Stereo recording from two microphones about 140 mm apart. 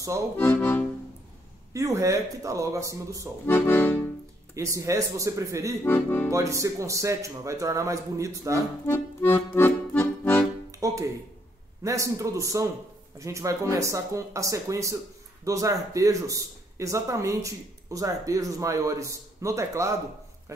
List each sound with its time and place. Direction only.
0.4 s accordion: 15° left (ahead or behind)
1.7 s speech: 20° right (ahead or behind)
3.4 s accordion: 15° left (ahead or behind)
4.6 s speech: 20° right (ahead or behind)
5.9 s accordion: 15° left (ahead or behind)
6.3 s speech: 20° right (ahead or behind)
8.8 s accordion: 15° left (ahead or behind)
10.7 s music: 25° right (ahead or behind)
11.8 s speech: 20° right (ahead or behind)